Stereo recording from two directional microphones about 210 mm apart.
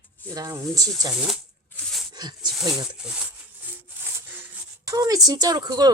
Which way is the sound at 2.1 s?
20° right (ahead or behind).